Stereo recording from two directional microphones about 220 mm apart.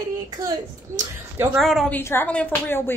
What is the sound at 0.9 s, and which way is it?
Speech, 10° right (ahead or behind).